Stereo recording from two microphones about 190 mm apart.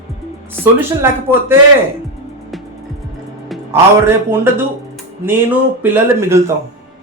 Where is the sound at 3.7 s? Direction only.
15° right (ahead or behind).